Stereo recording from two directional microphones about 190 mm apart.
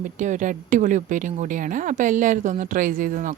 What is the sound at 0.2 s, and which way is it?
Speech, 40° right (ahead or behind).